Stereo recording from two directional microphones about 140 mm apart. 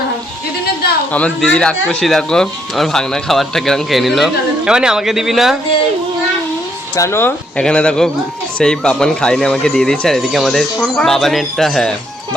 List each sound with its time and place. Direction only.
1.1 s speech: 10° left (ahead or behind)
6.9 s speech: 20° left (ahead or behind); by 11.9 s 5° left (ahead or behind)